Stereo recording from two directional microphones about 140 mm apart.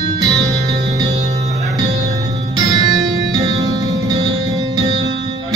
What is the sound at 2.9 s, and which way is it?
Music, 25° right (ahead or behind).